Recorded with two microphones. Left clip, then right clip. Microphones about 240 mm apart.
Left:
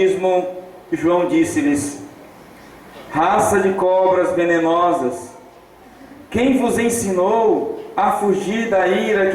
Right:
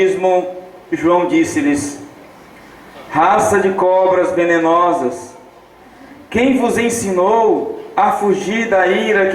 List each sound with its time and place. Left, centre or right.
0.0 s a man's voice: centre
3.1 s speech: centre
6.3 s speech: centre